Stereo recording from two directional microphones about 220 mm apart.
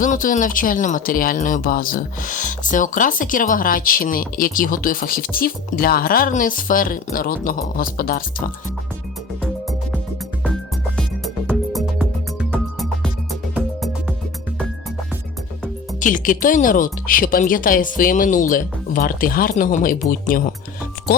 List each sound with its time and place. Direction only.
0.0 s speech: 35° left (ahead or behind)
10.4 s music: 5° left (ahead or behind)
16.0 s speech: 35° left (ahead or behind)